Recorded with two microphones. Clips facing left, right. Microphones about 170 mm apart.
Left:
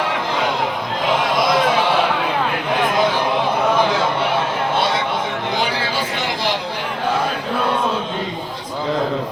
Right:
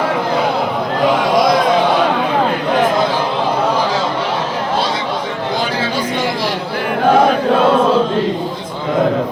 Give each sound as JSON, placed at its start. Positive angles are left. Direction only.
{"t": 7.1, "sound": "chant", "side_deg": -80}